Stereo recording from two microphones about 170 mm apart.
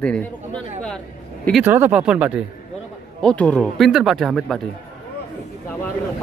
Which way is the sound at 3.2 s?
10° left (ahead or behind).